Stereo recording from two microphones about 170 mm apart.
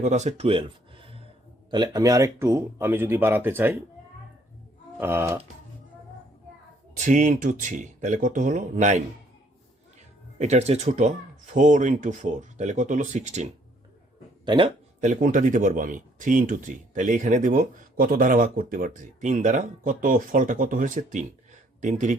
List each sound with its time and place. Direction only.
0.0 s speech: 45° right (ahead or behind)
1.7 s speech: 25° right (ahead or behind)
4.9 s speech: 15° right (ahead or behind)
6.9 s speech: 45° right (ahead or behind)
10.3 s speech: 40° right (ahead or behind)
14.4 s speech: 30° right (ahead or behind)
15.0 s speech: 50° right (ahead or behind)